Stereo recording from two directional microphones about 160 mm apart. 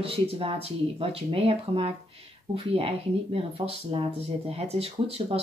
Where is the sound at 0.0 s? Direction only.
35° right (ahead or behind).